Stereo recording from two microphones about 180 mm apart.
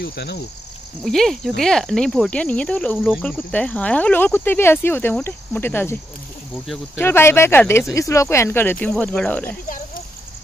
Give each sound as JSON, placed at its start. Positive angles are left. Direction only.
{"t": 0.0, "sound": "cricket", "side_deg": 65}
{"t": 1.0, "sound": "cricket", "side_deg": 0}
{"t": 3.2, "sound": "speech", "side_deg": 5}